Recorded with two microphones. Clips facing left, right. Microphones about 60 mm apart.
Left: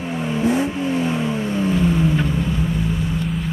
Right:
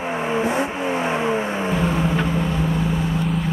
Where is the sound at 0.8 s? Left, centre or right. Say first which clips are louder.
Even; right.